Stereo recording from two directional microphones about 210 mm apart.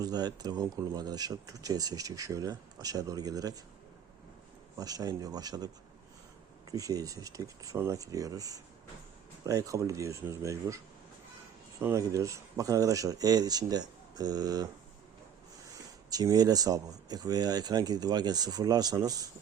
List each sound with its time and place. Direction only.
0.0 s speech: 20° right (ahead or behind)
4.8 s speech: 15° right (ahead or behind)
11.8 s speech: 15° right (ahead or behind)
15.6 s a sound: 15° right (ahead or behind)
17.1 s speech: 20° right (ahead or behind)